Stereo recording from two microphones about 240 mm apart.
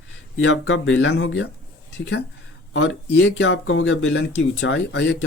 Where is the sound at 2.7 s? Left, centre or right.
Left.